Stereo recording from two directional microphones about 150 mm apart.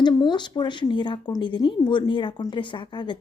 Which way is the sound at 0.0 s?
30° left (ahead or behind).